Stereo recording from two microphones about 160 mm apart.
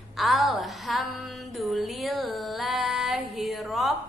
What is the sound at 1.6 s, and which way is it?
Child singing, centre (ahead or behind).